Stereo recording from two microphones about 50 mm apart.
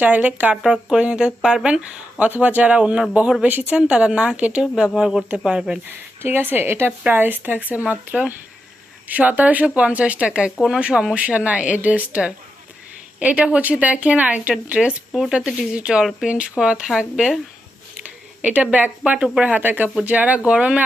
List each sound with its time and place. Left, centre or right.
0.0 s speech: right
0.7 s speech: right
4.8 s speech: centre
5.9 s a woman's voice: right
7.1 s speech: right; by 17.3 s centre
18.0 s speech: right